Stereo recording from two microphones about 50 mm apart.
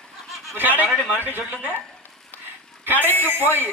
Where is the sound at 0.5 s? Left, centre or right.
Right.